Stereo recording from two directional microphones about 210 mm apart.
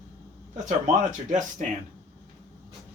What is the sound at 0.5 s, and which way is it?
Speech, 35° right (ahead or behind).